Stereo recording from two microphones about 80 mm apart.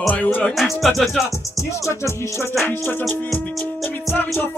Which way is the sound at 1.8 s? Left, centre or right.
Left.